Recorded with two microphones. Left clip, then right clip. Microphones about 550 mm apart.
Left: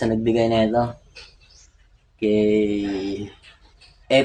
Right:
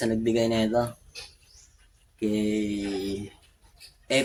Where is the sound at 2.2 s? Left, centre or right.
Right.